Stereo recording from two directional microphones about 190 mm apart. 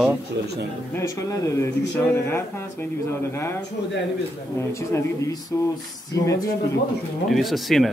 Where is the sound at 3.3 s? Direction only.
15° left (ahead or behind).